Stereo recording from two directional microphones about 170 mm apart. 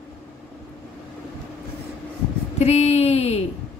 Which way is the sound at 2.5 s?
40° left (ahead or behind).